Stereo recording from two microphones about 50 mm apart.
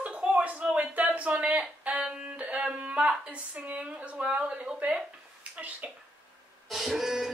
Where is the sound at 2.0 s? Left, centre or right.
Right.